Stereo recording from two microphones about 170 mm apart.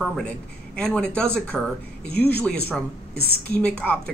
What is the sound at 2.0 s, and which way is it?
Speech, 70° left (ahead or behind).